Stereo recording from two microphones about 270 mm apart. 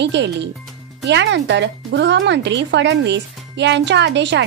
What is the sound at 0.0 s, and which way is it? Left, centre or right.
Speech, right.